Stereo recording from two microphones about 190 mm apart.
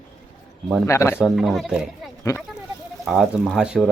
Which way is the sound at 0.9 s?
15° left (ahead or behind).